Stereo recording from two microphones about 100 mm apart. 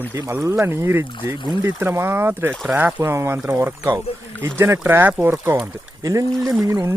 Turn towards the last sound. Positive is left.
turn(degrees=-35)  # may be behind; listen again after turning